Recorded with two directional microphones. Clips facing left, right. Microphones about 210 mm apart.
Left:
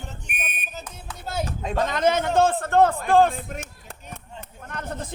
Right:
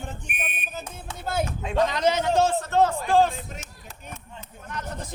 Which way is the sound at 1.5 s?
45° left (ahead or behind).